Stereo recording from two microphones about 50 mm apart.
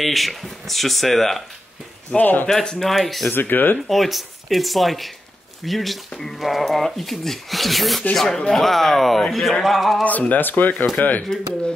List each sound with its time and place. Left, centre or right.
0.0 s speech: centre
2.0 s speech: left
2.4 s speech: centre
2.8 s speech: centre
3.3 s speech: left
3.9 s speech: centre
10.0 s speech: left